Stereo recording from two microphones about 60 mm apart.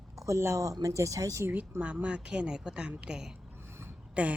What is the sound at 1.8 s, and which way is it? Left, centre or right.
Speech, right.